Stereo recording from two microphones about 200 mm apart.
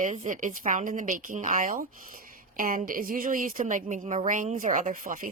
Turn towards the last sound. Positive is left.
turn(degrees=-40)  # may be behind; listen again after turning